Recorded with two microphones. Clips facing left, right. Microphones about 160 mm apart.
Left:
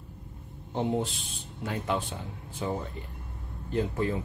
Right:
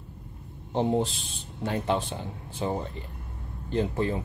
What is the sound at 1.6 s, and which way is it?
Speech, 30° right (ahead or behind).